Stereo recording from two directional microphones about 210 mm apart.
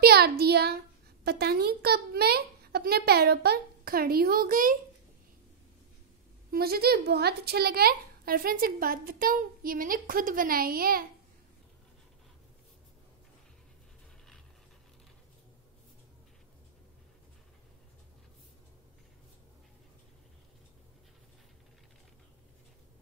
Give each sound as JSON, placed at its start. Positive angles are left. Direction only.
{"t": 0.0, "sound": "a woman's voice", "side_deg": -50}
{"t": 6.5, "sound": "a woman's voice", "side_deg": -45}